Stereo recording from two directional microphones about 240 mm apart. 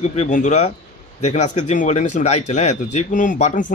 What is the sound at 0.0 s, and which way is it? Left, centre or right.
Speech, left.